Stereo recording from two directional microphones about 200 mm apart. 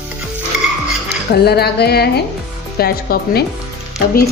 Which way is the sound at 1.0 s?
55° left (ahead or behind).